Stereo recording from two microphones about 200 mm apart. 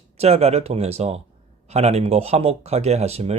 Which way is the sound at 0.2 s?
30° right (ahead or behind).